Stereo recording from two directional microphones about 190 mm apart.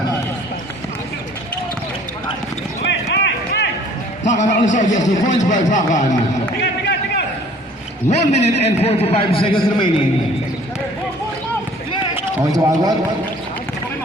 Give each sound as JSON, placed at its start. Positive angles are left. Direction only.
{"t": 2.8, "sound": "a sound", "side_deg": 65}
{"t": 4.2, "sound": "a man's voice", "side_deg": 40}
{"t": 8.2, "sound": "a man's voice", "side_deg": 35}
{"t": 12.1, "sound": "a man's voice", "side_deg": -20}